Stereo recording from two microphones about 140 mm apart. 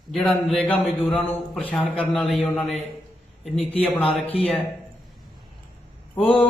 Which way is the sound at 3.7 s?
10° left (ahead or behind).